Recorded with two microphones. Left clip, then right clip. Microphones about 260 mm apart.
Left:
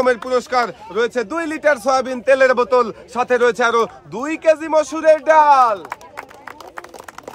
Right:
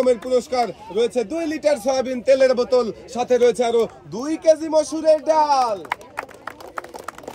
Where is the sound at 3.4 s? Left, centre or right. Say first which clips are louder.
Left 2 dB; left.